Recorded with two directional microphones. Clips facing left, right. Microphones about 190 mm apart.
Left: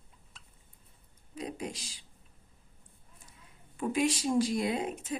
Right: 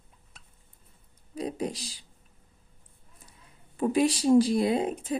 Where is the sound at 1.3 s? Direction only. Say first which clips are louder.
Right 6 dB; 35° right (ahead or behind).